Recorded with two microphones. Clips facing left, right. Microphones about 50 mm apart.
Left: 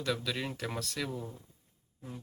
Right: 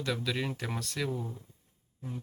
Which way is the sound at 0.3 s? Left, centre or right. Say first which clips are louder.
Right 2 dB; centre.